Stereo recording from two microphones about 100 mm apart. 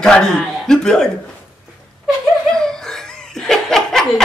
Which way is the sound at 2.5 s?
5° left (ahead or behind).